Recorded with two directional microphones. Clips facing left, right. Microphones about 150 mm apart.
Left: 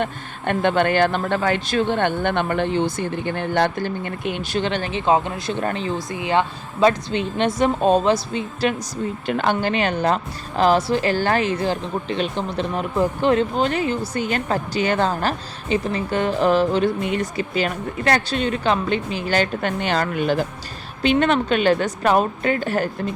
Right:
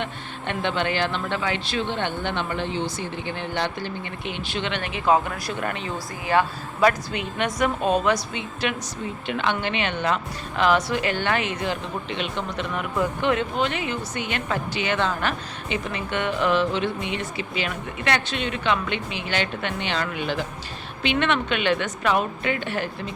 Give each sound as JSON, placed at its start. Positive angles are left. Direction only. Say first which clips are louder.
{"t": 0.0, "sound": "speech", "louder": "left 6 dB", "side_deg": 50}
{"t": 6.1, "sound": "a woman's voice", "louder": "even", "side_deg": 20}